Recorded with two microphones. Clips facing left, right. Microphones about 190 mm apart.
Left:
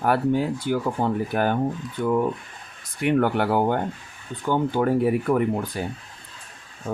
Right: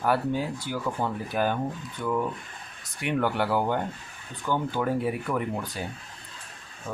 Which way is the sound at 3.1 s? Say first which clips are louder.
Left 5 dB; 50° left (ahead or behind).